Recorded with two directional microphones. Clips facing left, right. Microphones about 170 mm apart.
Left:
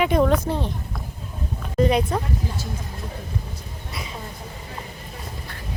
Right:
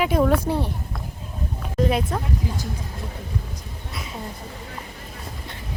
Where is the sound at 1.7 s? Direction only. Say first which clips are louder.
Left 3 dB; centre (ahead or behind).